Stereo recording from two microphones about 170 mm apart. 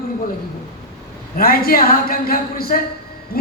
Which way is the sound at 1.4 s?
60° left (ahead or behind).